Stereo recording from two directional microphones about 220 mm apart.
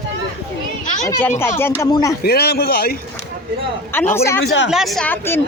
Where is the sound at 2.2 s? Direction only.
45° left (ahead or behind).